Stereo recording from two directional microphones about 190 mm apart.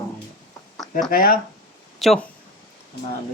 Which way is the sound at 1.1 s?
50° left (ahead or behind).